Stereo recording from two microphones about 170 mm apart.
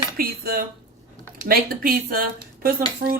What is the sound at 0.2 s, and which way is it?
Speech, 60° right (ahead or behind).